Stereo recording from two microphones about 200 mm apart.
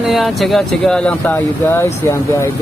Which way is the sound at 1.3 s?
15° left (ahead or behind).